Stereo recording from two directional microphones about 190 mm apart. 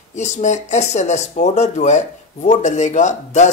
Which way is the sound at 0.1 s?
35° left (ahead or behind).